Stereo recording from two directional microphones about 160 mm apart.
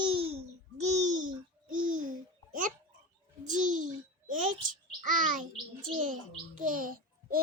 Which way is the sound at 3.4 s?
50° right (ahead or behind).